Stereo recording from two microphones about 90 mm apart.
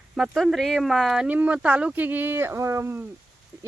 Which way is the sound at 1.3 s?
15° right (ahead or behind).